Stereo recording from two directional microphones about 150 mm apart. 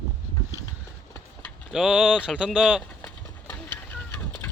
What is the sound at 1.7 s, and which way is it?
Speech, centre (ahead or behind).